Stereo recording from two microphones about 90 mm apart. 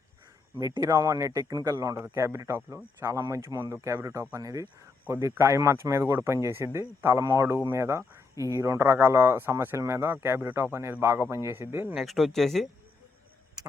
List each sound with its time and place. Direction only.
0.8 s speech: 40° right (ahead or behind)
5.0 s speech: 25° right (ahead or behind)
11.9 s speech: centre (ahead or behind)